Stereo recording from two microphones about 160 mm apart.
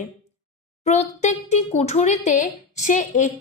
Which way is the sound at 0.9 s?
45° left (ahead or behind).